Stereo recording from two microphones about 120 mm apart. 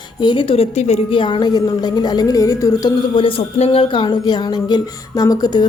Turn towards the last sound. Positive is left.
turn(degrees=35)  # may be behind; listen again after turning